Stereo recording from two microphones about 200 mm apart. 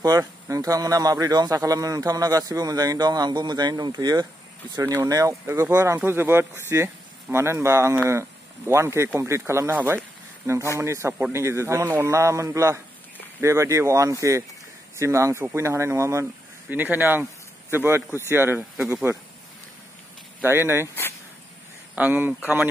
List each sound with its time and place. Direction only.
0.0 s a man's voice: 20° right (ahead or behind)
20.4 s a man's voice: 10° right (ahead or behind)
21.9 s speech: 10° right (ahead or behind)